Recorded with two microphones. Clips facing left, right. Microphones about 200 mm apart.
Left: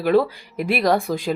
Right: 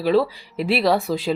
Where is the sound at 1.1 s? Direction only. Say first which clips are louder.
Right 1 dB; 50° left (ahead or behind).